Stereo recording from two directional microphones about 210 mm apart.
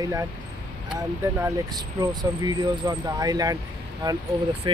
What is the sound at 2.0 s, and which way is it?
Speech, 20° right (ahead or behind).